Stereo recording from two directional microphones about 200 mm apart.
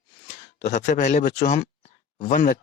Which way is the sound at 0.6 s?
35° left (ahead or behind).